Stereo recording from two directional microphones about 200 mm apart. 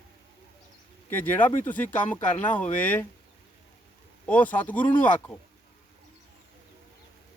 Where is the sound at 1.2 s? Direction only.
10° left (ahead or behind).